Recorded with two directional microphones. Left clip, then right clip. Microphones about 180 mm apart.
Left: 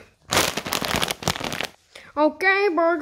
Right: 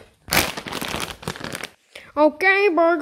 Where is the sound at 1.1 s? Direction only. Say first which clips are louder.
Left 5 dB; 50° left (ahead or behind).